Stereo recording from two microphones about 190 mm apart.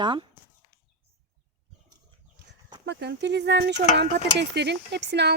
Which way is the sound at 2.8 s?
65° right (ahead or behind).